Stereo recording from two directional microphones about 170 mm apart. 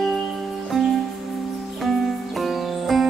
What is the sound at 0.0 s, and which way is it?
Music, centre (ahead or behind).